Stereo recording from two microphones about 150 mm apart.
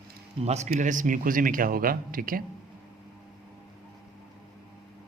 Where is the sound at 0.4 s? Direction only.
45° right (ahead or behind); by 2.4 s 70° right (ahead or behind).